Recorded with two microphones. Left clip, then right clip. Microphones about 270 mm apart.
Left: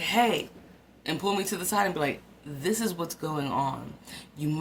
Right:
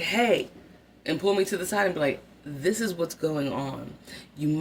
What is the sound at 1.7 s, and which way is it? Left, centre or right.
Speech, centre.